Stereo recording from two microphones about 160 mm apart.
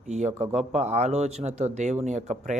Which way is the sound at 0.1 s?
45° right (ahead or behind).